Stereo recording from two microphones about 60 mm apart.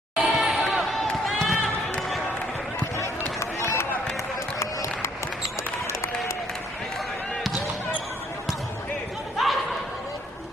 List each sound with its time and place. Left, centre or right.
0.2 s a sound: centre
0.8 s basketball bounce: centre
3.0 s run: left
5.9 s applause: left
9.4 s laughter: centre